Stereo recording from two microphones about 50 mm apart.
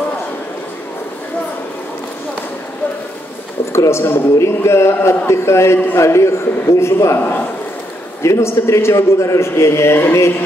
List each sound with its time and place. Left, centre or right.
3.7 s speech: left
4.4 s a man's voice: left
7.2 s speech: left
8.2 s a man's voice: left